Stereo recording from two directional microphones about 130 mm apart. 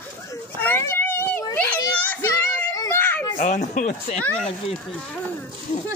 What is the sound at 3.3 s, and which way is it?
Speech, 75° left (ahead or behind).